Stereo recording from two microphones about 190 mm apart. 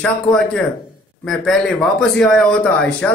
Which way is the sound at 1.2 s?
Centre (ahead or behind).